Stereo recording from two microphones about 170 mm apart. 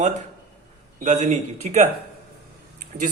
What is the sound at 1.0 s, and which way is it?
Speech, 40° right (ahead or behind).